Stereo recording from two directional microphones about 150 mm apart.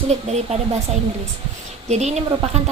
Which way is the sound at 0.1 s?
45° right (ahead or behind).